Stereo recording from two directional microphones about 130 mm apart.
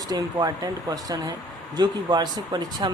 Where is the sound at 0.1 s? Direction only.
30° right (ahead or behind).